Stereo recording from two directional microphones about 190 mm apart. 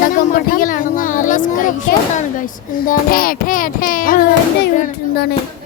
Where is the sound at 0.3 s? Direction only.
50° left (ahead or behind).